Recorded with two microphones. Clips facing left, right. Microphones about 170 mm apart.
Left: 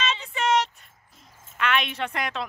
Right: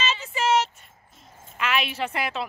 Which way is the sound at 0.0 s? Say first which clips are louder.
Right 1 dB; 5° right (ahead or behind).